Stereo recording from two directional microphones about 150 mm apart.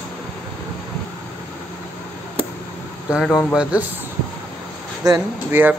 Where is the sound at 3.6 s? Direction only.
10° right (ahead or behind).